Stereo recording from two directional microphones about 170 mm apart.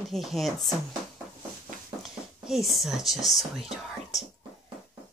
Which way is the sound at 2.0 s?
Centre (ahead or behind).